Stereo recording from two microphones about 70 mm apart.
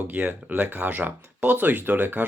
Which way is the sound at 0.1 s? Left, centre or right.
Right.